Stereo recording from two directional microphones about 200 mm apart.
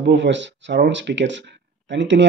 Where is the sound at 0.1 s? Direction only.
65° right (ahead or behind).